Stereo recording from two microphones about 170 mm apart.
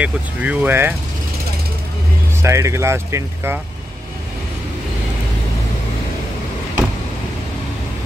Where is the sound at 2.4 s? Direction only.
15° right (ahead or behind).